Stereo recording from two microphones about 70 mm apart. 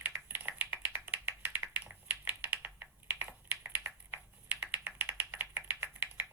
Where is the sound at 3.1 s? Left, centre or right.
Right.